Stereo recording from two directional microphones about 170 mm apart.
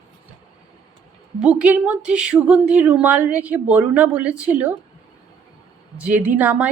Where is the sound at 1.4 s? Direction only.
5° right (ahead or behind).